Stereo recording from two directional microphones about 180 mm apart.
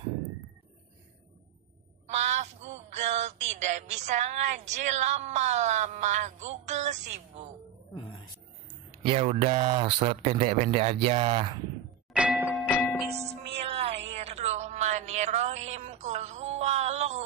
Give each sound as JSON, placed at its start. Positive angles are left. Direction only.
{"t": 2.1, "sound": "a sound", "side_deg": -40}
{"t": 4.6, "sound": "speech", "side_deg": -40}
{"t": 7.9, "sound": "music", "side_deg": 30}
{"t": 9.0, "sound": "speech", "side_deg": -35}
{"t": 12.1, "sound": "music", "side_deg": -5}
{"t": 12.7, "sound": "music", "side_deg": 10}
{"t": 13.3, "sound": "music", "side_deg": -35}